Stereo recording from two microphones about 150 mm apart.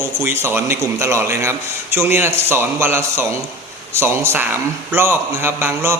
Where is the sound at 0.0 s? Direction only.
20° right (ahead or behind).